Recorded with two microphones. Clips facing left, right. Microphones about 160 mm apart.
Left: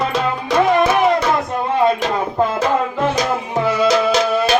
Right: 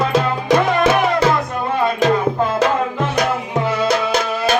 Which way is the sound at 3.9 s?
55° right (ahead or behind).